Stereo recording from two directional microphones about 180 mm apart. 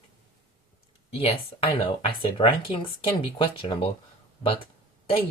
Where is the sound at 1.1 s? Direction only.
30° left (ahead or behind).